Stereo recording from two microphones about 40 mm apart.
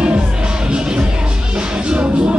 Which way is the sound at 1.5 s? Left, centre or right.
Right.